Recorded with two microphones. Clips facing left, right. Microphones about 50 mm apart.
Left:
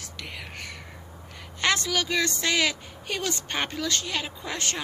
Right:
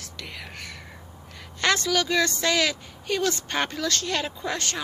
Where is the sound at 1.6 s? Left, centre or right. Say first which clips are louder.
Right 2 dB; left.